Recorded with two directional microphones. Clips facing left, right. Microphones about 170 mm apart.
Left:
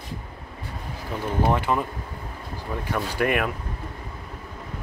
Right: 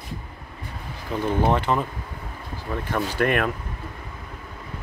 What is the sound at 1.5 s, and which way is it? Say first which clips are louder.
Speech: right 1 dB; 10° left (ahead or behind).